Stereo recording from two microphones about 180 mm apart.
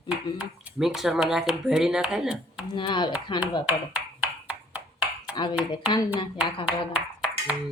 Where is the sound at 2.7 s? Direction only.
25° left (ahead or behind).